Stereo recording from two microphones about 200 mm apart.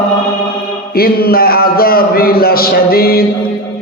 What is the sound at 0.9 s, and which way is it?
A man's voice, 50° left (ahead or behind).